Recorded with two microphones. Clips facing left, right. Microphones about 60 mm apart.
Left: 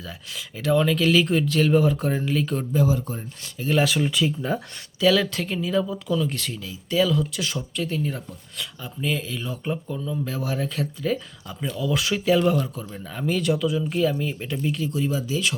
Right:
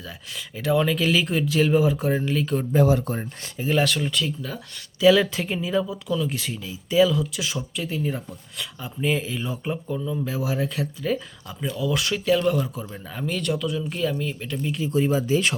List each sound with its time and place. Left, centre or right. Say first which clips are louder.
0.0 s speech: even; centre
2.8 s speech: right 3 dB; right
3.7 s speech: left 1 dB; centre
4.9 s speech: right 3 dB; centre
12.5 s speech: even; centre
14.8 s speech: right 4 dB; right